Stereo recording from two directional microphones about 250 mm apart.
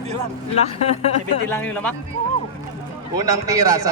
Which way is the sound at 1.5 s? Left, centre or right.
Centre.